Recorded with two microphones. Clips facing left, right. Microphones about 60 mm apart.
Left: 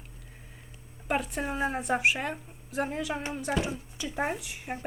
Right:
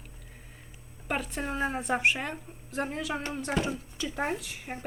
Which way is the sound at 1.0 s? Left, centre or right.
Centre.